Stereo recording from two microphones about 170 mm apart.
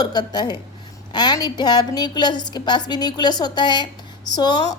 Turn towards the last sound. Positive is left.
turn(degrees=25)  # may be behind; listen again after turning